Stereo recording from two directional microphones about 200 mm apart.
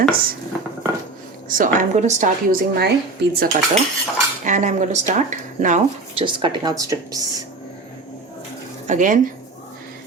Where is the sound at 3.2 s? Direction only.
55° right (ahead or behind).